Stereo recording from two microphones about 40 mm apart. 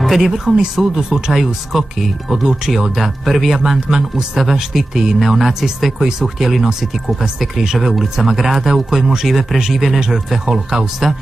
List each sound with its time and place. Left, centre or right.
0.0 s speech: centre
9.9 s speech: centre